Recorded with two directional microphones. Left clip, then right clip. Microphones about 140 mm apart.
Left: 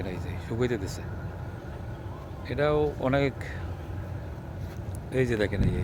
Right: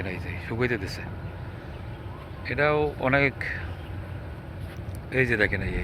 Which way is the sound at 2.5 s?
5° left (ahead or behind).